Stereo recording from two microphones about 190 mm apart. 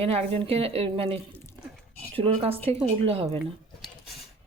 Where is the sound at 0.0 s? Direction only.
30° right (ahead or behind).